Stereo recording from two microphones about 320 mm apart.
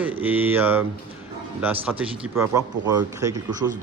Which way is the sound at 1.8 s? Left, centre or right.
Centre.